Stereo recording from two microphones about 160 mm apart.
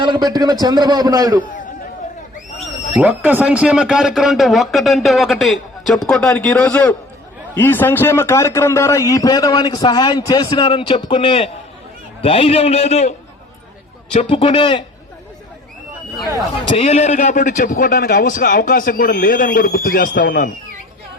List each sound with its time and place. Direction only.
0.0 s a man's voice: 30° right (ahead or behind)
2.7 s a sound: 45° left (ahead or behind)
3.0 s a man's voice: 10° right (ahead or behind); by 14.8 s 30° left (ahead or behind)
16.6 s a man's voice: 40° left (ahead or behind); by 20.5 s 65° left (ahead or behind)